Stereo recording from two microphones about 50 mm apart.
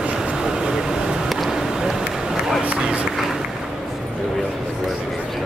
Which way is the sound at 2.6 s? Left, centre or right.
Right.